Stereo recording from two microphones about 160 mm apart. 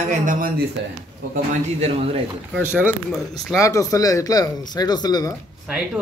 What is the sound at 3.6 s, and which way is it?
Speech, 20° left (ahead or behind).